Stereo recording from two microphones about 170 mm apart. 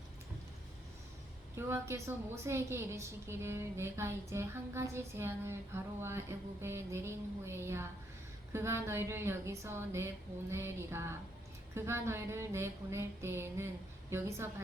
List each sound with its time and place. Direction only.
1.5 s a woman's voice: 15° right (ahead or behind)